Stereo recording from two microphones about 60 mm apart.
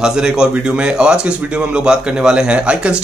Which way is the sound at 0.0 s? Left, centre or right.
Centre.